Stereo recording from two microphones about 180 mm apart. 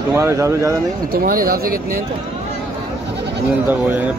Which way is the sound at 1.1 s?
55° right (ahead or behind).